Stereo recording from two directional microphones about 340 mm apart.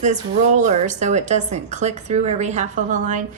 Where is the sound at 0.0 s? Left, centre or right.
Right.